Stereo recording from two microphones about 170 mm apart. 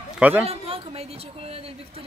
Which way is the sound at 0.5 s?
35° right (ahead or behind).